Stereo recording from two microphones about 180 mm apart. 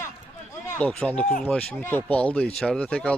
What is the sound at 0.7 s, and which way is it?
Speech, 5° left (ahead or behind).